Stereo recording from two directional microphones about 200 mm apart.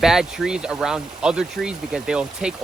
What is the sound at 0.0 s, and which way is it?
Speech, centre (ahead or behind).